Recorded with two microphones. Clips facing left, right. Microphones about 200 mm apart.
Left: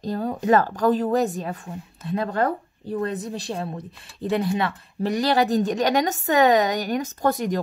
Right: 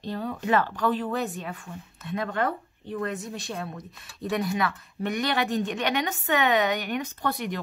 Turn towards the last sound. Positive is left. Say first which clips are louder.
# left 7 dB
turn(degrees=40)  # may be behind; listen again after turning